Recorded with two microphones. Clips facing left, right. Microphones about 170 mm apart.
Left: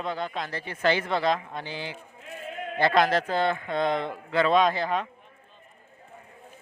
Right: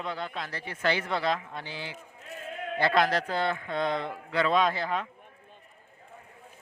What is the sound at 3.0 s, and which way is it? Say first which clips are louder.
Speech: left 3 dB; 25° left (ahead or behind).